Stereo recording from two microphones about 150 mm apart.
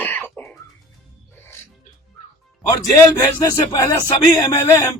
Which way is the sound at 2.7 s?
20° left (ahead or behind).